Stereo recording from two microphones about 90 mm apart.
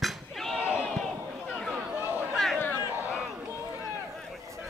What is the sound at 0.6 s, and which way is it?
Battle cry, 15° right (ahead or behind).